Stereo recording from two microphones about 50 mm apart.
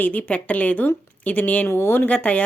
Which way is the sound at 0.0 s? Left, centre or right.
Left.